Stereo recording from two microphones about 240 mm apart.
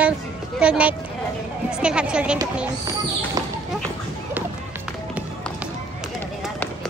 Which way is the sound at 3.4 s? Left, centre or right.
Centre.